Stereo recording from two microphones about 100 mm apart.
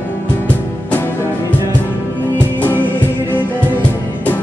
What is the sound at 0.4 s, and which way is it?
Music, 20° left (ahead or behind).